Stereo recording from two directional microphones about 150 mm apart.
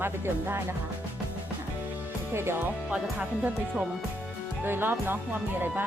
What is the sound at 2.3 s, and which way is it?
Speech, 15° right (ahead or behind).